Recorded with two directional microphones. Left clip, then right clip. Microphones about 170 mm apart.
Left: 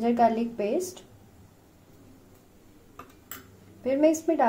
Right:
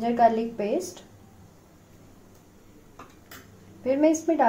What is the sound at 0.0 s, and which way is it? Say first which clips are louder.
A woman's voice: right 2 dB; 15° left (ahead or behind).